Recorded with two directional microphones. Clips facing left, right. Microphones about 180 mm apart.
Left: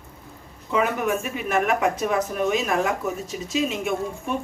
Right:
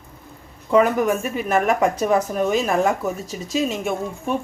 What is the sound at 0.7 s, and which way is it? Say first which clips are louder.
Speech: right 6 dB; 40° right (ahead or behind).